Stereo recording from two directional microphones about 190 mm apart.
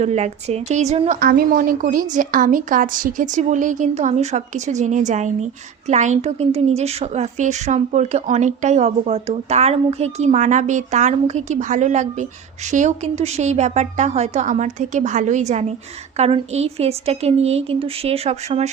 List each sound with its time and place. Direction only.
0.0 s a woman's voice: 35° right (ahead or behind)